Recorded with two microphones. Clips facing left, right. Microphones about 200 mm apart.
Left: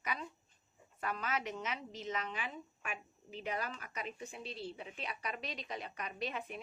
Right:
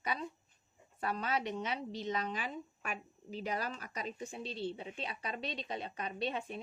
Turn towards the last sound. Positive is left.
turn(degrees=-30)  # may be behind; listen again after turning